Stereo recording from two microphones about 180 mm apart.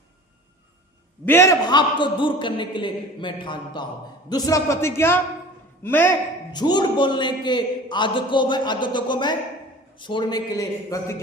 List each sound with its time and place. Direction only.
1.2 s a man's voice: 15° left (ahead or behind)
6.5 s a man's voice: 25° left (ahead or behind)